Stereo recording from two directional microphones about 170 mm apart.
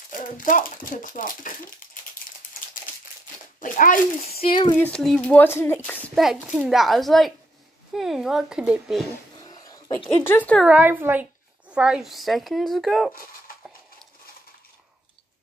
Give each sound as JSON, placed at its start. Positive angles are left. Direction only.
{"t": 0.1, "sound": "speech", "side_deg": 50}
{"t": 3.6, "sound": "speech", "side_deg": 50}
{"t": 4.7, "sound": "a child's voice", "side_deg": 10}
{"t": 9.4, "sound": "a sound", "side_deg": 20}
{"t": 9.9, "sound": "speech", "side_deg": 10}
{"t": 10.6, "sound": "a woman's voice", "side_deg": -10}